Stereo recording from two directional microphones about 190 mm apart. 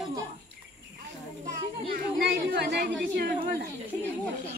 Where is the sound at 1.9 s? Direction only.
55° right (ahead or behind).